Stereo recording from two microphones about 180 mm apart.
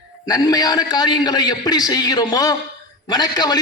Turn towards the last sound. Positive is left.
turn(degrees=20)  # may be behind; listen again after turning